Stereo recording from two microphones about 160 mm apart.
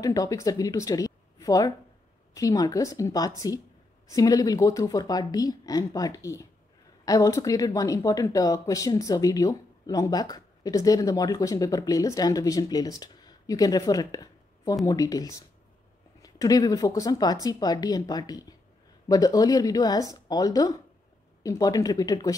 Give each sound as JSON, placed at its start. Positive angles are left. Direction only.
{"t": 0.0, "sound": "speech", "side_deg": 20}